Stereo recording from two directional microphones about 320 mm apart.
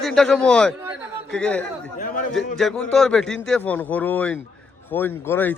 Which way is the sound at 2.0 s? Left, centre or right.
Left.